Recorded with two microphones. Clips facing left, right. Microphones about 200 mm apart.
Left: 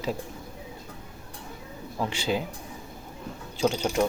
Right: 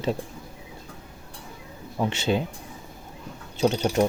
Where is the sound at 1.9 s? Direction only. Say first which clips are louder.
Right 3 dB; 20° right (ahead or behind).